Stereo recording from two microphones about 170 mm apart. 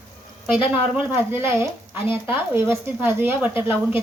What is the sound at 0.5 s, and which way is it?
A woman's voice, 10° right (ahead or behind).